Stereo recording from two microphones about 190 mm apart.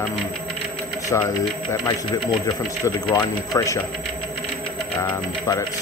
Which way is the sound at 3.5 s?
15° left (ahead or behind).